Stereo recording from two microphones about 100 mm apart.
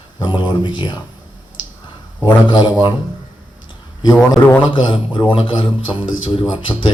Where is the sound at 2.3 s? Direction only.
50° left (ahead or behind).